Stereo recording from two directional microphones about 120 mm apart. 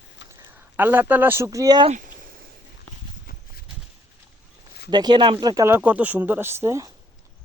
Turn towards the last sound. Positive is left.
turn(degrees=-25)  # may be behind; listen again after turning